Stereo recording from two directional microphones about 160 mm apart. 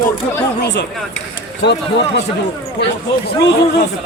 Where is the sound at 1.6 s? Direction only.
90° left.